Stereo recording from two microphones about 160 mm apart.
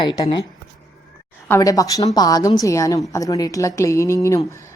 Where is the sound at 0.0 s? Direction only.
30° left (ahead or behind).